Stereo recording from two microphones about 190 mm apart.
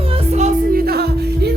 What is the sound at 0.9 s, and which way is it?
Music, 55° right (ahead or behind).